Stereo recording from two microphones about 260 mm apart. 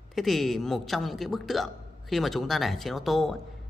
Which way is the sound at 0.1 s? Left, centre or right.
Centre.